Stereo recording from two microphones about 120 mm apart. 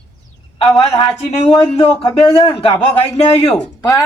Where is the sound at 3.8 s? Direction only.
30° left (ahead or behind).